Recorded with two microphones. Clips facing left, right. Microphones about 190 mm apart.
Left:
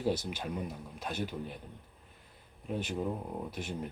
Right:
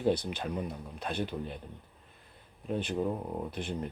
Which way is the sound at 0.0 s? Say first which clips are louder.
Right 3 dB; 5° left (ahead or behind).